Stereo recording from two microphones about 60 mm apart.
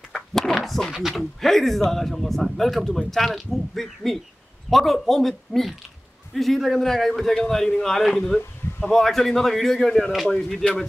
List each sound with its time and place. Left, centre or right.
0.1 s a sound: centre
0.9 s speech: centre
10.3 s a man's voice: centre